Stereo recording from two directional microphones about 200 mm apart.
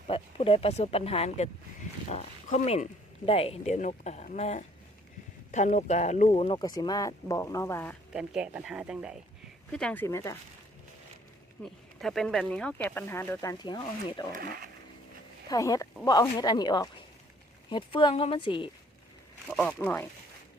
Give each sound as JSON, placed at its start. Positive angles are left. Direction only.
{"t": 0.1, "sound": "speech", "side_deg": 30}
{"t": 8.1, "sound": "speech", "side_deg": -5}
{"t": 9.7, "sound": "speech", "side_deg": 5}
{"t": 11.6, "sound": "speech", "side_deg": 0}
{"t": 14.3, "sound": "speech", "side_deg": -45}
{"t": 15.4, "sound": "speech", "side_deg": 15}
{"t": 19.5, "sound": "speech", "side_deg": 5}